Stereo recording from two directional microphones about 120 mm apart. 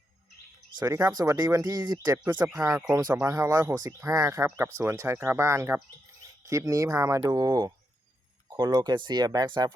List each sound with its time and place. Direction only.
0.8 s speech: 30° right (ahead or behind)